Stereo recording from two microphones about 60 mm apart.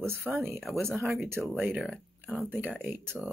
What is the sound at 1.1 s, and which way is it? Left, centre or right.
Speech, right.